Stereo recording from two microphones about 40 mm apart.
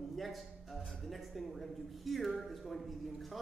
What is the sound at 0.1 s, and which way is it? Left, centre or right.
A man's voice, centre.